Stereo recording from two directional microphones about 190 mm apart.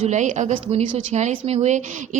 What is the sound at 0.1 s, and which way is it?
A woman's voice, 40° right (ahead or behind).